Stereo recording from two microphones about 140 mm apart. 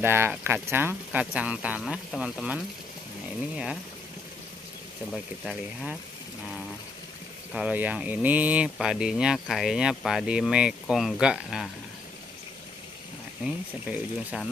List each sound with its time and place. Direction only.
0.0 s speech: 15° right (ahead or behind)
5.4 s speech: 5° right (ahead or behind)
7.5 s speech: 10° right (ahead or behind)
13.8 s speech: centre (ahead or behind)